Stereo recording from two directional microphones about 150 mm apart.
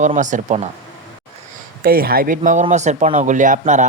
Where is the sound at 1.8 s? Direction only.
80° right.